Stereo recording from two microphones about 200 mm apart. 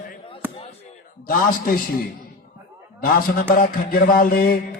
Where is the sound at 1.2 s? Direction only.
45° left (ahead or behind).